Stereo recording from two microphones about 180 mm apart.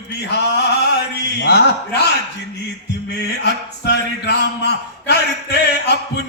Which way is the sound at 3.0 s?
70° left (ahead or behind).